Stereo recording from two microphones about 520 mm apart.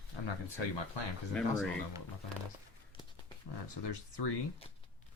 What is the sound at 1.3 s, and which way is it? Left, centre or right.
Speech, centre.